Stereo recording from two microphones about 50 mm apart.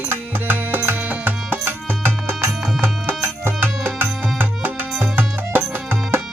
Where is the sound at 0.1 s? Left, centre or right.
Right.